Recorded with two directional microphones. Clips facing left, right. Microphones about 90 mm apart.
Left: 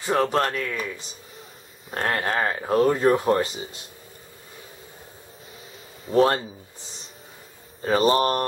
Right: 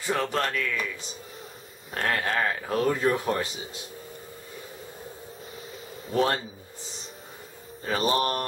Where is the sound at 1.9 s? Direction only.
25° left (ahead or behind).